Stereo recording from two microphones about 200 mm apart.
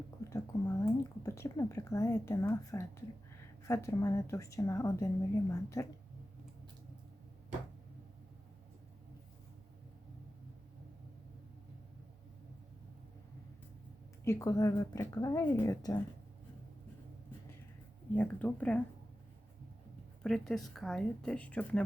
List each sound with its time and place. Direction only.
0.3 s a sound: 15° left (ahead or behind)
3.7 s speech: 15° left (ahead or behind)
14.3 s speech: 15° left (ahead or behind)
18.1 s speech: 5° left (ahead or behind)
20.2 s speech: centre (ahead or behind)